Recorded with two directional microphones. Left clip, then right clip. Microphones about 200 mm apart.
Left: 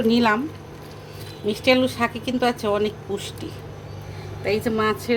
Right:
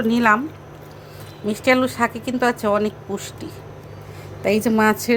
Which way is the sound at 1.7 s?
10° right (ahead or behind).